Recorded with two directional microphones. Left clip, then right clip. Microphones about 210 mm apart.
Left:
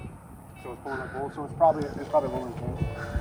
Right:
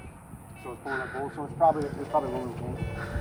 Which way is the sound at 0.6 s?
10° left (ahead or behind).